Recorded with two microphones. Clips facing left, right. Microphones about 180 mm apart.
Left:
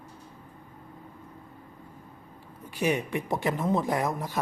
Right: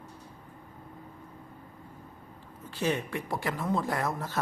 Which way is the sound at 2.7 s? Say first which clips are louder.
Left 3 dB; 15° left (ahead or behind).